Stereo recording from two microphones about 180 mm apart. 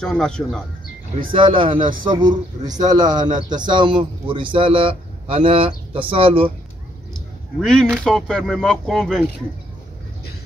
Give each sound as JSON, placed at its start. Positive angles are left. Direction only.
{"t": 0.0, "sound": "speech", "side_deg": 5}
{"t": 1.3, "sound": "a man's voice", "side_deg": -30}
{"t": 7.2, "sound": "speech", "side_deg": 5}